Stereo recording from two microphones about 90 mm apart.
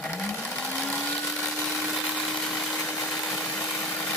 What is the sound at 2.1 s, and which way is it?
Vehicle, 5° left (ahead or behind).